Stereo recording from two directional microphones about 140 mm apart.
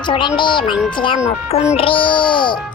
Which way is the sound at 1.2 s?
50° left (ahead or behind).